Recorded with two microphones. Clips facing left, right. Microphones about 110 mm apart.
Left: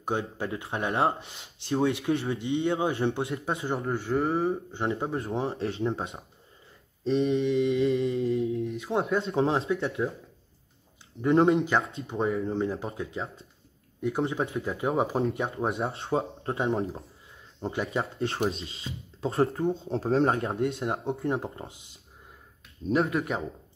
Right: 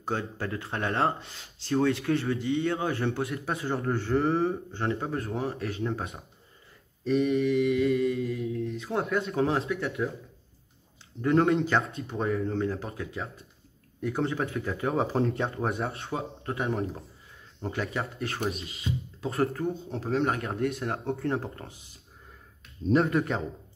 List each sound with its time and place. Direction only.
0.0 s speech: 15° left (ahead or behind)
3.8 s speech: 5° left (ahead or behind)
4.7 s speech: 20° left (ahead or behind)
11.1 s speech: 20° left (ahead or behind)
15.1 s speech: 5° left (ahead or behind)
15.6 s speech: 25° left (ahead or behind)
22.8 s speech: centre (ahead or behind)